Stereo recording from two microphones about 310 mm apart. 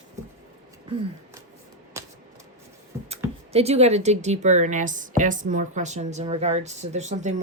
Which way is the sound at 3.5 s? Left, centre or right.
Centre.